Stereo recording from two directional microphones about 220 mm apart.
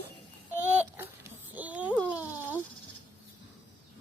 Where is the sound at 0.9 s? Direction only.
10° right (ahead or behind).